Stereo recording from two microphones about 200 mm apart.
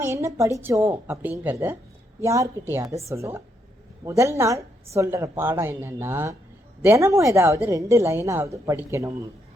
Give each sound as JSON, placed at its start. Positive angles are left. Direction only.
{"t": 0.0, "sound": "a woman's voice", "side_deg": -15}